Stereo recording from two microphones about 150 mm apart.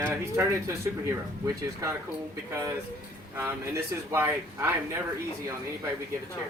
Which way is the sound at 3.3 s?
15° right (ahead or behind).